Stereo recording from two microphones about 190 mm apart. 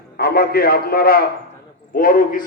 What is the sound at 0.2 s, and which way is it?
A man's voice, 55° left (ahead or behind).